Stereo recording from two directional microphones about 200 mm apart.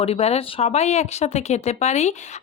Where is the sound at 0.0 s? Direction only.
30° left (ahead or behind).